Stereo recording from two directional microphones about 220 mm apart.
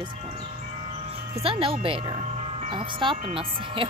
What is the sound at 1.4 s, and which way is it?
Speech, 25° right (ahead or behind).